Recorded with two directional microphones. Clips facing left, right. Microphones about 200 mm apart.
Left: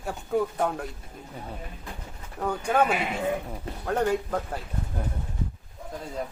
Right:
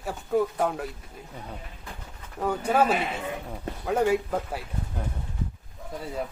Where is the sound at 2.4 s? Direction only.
5° right (ahead or behind).